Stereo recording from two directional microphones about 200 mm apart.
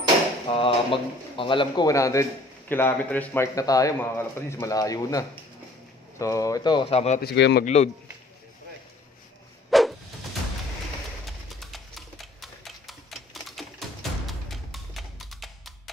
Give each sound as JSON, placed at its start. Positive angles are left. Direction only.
{"t": 0.5, "sound": "a man's voice", "side_deg": 25}
{"t": 7.2, "sound": "speech", "side_deg": 55}
{"t": 7.6, "sound": "speech", "side_deg": 35}
{"t": 9.7, "sound": "a sound", "side_deg": 0}
{"t": 11.2, "sound": "typewriter", "side_deg": 0}